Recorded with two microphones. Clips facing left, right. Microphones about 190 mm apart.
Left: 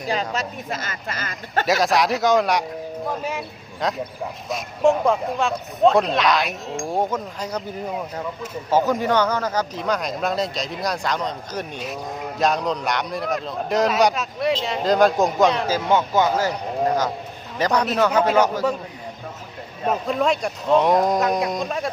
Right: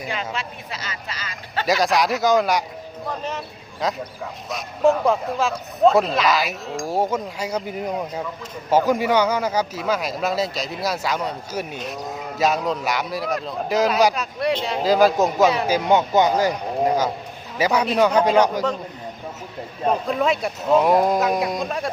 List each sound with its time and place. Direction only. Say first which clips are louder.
0.1 s speech: left 6 dB; 40° left (ahead or behind)
1.6 s a man's voice: even; centre (ahead or behind)
15.6 s a man's voice: right 2 dB; 15° right (ahead or behind)
19.9 s speech: even; centre (ahead or behind)